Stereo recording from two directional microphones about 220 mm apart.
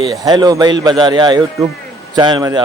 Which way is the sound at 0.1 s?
15° right (ahead or behind).